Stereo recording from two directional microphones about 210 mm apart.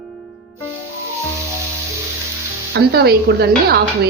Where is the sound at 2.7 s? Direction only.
50° right (ahead or behind).